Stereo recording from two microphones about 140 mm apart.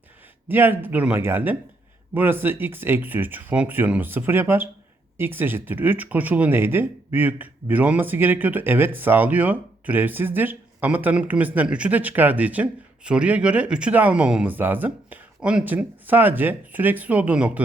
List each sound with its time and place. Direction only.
0.4 s speech: 15° right (ahead or behind)